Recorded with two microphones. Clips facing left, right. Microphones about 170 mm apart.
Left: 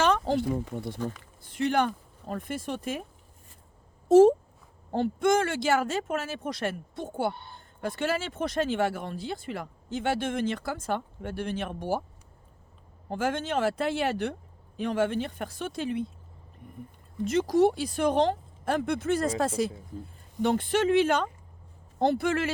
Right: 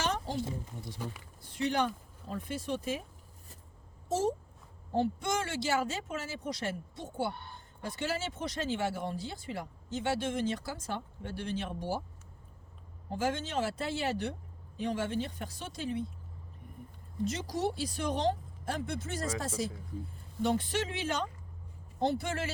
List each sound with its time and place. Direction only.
0.0 s speech: 75° left (ahead or behind)
1.5 s speech: 55° left (ahead or behind)
5.2 s speech: 55° left (ahead or behind)
13.1 s speech: 55° left (ahead or behind)
17.2 s speech: 55° left (ahead or behind)